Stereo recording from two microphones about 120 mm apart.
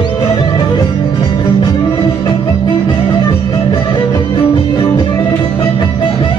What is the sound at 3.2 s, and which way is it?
Music, 30° left (ahead or behind).